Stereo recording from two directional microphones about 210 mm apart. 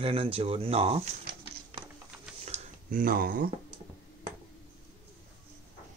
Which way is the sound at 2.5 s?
40° right (ahead or behind).